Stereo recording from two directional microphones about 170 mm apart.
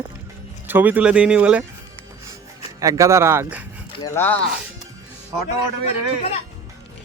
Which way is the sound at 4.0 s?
10° left (ahead or behind).